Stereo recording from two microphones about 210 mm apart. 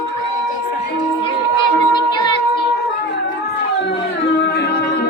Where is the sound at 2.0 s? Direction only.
20° left (ahead or behind).